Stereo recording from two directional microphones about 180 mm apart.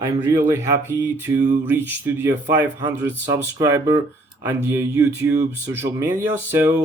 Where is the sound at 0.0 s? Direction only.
15° right (ahead or behind).